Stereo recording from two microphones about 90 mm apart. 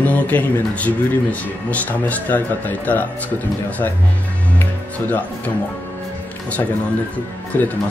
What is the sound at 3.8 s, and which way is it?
Speech, 35° left (ahead or behind).